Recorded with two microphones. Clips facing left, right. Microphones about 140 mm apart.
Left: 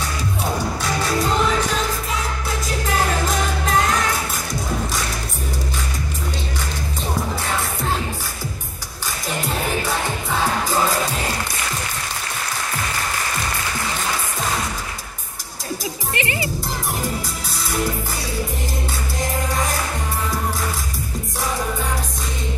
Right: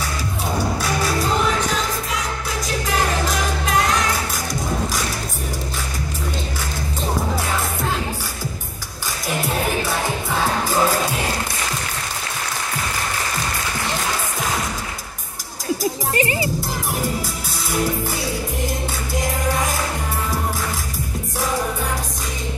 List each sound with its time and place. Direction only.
15.8 s music: 40° right (ahead or behind)